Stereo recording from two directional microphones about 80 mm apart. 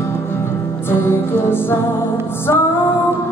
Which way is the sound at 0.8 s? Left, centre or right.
Left.